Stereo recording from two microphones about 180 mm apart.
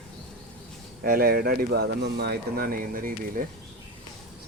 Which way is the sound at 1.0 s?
55° right (ahead or behind).